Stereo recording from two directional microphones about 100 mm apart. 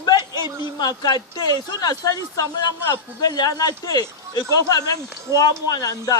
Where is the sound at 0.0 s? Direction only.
45° left (ahead or behind).